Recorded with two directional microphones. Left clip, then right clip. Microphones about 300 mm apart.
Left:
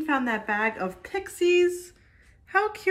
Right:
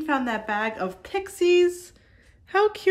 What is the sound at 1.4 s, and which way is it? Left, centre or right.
A woman's voice, right.